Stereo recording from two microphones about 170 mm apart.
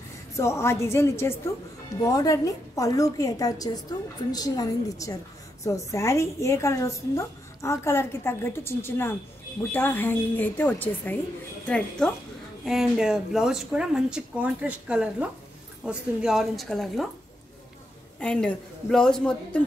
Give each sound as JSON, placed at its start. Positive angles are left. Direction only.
{"t": 0.4, "sound": "a woman's voice", "side_deg": 15}
{"t": 18.2, "sound": "speech", "side_deg": 5}